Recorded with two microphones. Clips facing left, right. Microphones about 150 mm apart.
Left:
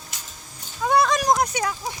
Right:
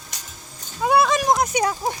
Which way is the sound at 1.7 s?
50° right (ahead or behind).